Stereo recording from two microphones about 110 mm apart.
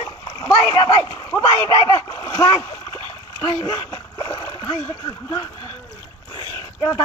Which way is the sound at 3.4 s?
40° left (ahead or behind).